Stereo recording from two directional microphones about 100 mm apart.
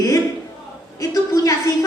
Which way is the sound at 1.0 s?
35° left (ahead or behind).